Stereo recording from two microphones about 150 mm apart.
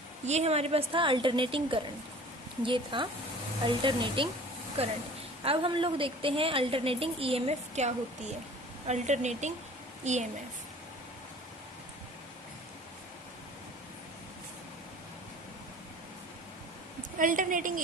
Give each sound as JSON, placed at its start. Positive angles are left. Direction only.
{"t": 0.3, "sound": "a woman's voice", "side_deg": -45}
{"t": 17.2, "sound": "a woman's voice", "side_deg": -60}